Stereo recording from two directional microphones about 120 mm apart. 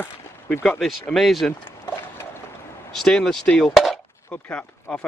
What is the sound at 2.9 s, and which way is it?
Speech, 5° left (ahead or behind).